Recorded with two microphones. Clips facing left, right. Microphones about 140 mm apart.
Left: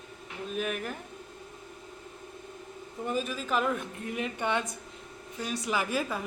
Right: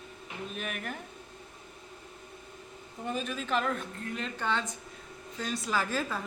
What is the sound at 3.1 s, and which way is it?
Speech, 5° left (ahead or behind).